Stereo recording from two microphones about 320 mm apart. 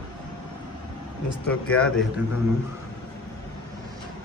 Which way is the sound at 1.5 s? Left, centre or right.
Centre.